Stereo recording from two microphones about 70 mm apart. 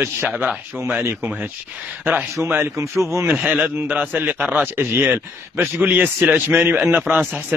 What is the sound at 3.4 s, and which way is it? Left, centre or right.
A man's voice, centre.